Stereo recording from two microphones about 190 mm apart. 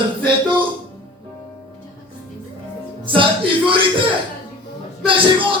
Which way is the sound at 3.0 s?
25° right (ahead or behind).